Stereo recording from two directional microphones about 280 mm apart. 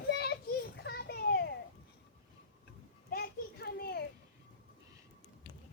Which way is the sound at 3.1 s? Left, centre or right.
Left.